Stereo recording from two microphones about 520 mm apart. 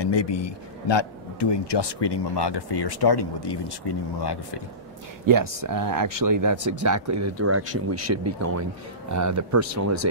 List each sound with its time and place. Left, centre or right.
0.0 s a man's voice: left
5.2 s speech: right